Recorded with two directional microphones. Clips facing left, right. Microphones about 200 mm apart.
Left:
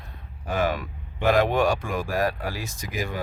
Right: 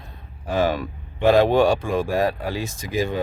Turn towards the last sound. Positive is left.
turn(degrees=-25)  # may be behind; listen again after turning